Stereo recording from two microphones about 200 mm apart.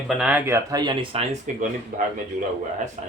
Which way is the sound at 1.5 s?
40° right (ahead or behind).